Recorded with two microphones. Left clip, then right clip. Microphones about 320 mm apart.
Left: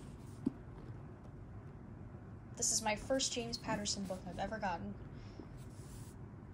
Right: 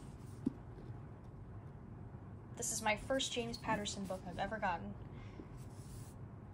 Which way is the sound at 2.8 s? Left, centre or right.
Centre.